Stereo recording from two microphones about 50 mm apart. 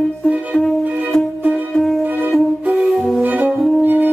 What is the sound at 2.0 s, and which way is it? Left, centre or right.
Flute, right.